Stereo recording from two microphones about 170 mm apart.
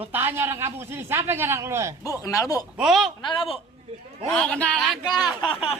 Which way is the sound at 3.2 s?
30° left (ahead or behind).